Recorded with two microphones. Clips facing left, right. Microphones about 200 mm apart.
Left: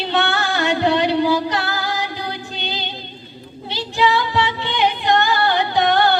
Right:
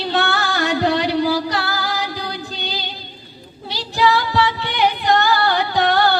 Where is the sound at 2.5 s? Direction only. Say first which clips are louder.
Even; 20° left (ahead or behind).